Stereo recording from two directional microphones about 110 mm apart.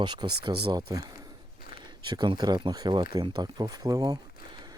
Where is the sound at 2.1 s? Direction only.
40° right (ahead or behind).